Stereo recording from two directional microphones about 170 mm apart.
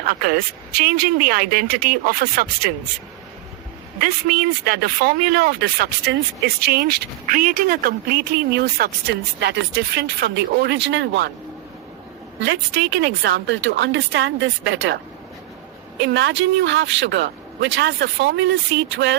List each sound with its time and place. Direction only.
0.0 s speech: 60° right (ahead or behind)
4.0 s speech: 60° right (ahead or behind); by 11.3 s 90° right
13.0 s speech: 85° right
16.1 s speech: 90° right